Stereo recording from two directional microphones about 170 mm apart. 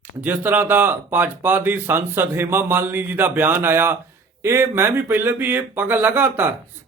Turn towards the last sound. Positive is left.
turn(degrees=-10)  # may be behind; listen again after turning